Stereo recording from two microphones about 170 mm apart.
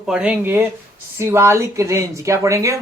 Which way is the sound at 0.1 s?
5° right (ahead or behind).